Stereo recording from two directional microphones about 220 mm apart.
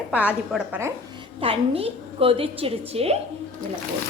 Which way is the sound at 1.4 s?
25° right (ahead or behind).